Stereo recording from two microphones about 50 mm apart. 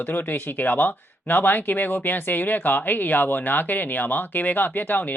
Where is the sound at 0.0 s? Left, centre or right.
Left.